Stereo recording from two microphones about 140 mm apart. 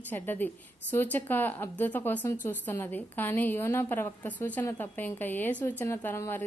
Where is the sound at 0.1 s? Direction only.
15° left (ahead or behind).